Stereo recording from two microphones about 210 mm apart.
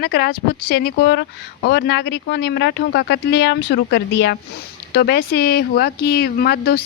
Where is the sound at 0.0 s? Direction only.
45° left (ahead or behind).